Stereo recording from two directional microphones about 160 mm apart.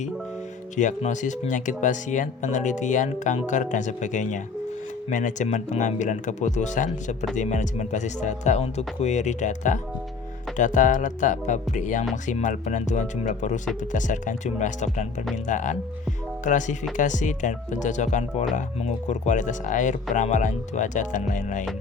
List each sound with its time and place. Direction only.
0.8 s speech: 50° left (ahead or behind)